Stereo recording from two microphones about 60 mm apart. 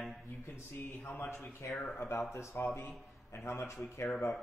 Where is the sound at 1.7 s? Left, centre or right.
Centre.